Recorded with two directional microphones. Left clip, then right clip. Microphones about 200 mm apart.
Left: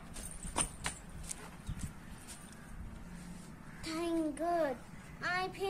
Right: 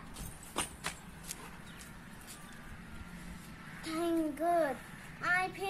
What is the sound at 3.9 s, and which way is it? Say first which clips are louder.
Speech: right 2 dB; 10° left (ahead or behind).